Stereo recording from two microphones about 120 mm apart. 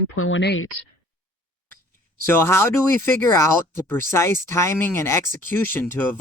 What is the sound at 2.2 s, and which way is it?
Speech, 20° left (ahead or behind).